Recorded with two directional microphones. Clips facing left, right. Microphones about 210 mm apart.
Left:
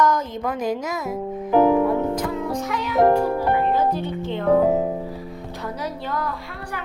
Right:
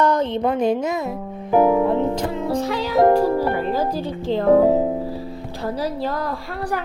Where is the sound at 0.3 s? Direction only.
30° right (ahead or behind).